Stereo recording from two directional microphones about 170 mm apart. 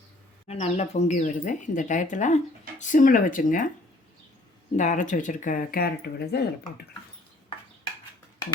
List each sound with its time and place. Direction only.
0.4 s speech: 40° left (ahead or behind)
4.8 s speech: 45° left (ahead or behind); by 6.4 s 65° left (ahead or behind)